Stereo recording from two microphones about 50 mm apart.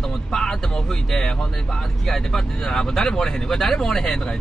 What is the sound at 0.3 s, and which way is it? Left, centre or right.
Speech, centre.